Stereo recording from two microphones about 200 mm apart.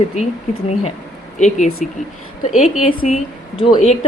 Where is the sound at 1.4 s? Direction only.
35° left (ahead or behind).